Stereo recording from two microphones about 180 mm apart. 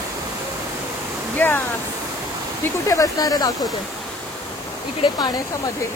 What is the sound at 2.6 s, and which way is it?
Speech, 20° left (ahead or behind).